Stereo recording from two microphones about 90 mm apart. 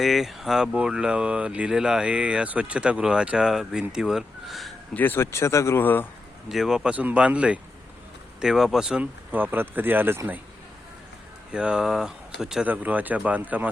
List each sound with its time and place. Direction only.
0.0 s speech: centre (ahead or behind)
4.9 s speech: 25° left (ahead or behind)
6.5 s speech: 5° right (ahead or behind)
9.3 s speech: 20° right (ahead or behind)
11.5 s speech: 10° right (ahead or behind)
12.6 s speech: 20° right (ahead or behind)